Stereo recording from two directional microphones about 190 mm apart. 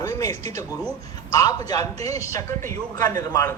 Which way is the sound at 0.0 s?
15° left (ahead or behind).